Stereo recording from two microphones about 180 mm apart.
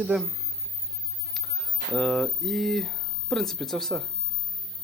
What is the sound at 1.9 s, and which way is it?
Speech, centre (ahead or behind).